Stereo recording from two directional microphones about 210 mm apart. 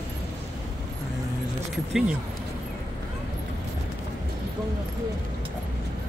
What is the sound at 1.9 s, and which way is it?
Speech, 5° right (ahead or behind).